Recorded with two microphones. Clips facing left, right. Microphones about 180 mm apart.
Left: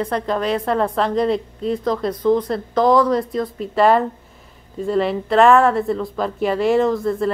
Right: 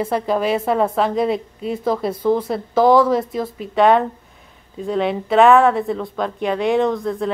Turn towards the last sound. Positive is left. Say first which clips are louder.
# left 1 dB
turn(degrees=0)  # may be behind; listen again after turning